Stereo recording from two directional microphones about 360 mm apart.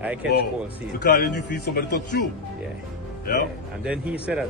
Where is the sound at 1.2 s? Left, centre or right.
Left.